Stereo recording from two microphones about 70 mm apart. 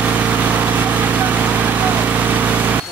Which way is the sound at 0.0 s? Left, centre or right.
Right.